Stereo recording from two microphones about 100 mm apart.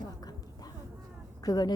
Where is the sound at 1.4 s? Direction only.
40° left (ahead or behind).